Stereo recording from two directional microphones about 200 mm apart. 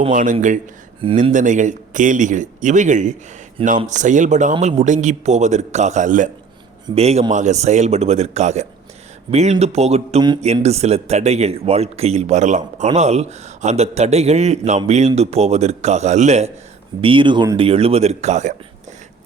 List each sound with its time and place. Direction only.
0.1 s speech: 40° right (ahead or behind)